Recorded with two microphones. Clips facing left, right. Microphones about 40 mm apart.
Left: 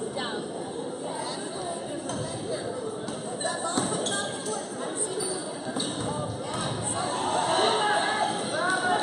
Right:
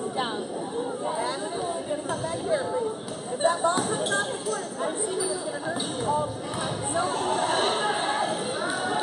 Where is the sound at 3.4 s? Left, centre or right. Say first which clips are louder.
Right 9 dB; right.